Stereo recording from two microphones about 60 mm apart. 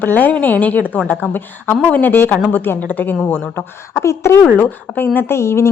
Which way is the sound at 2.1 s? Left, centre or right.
Left.